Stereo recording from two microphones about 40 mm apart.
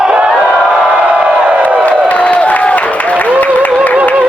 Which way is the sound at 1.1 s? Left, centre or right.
Right.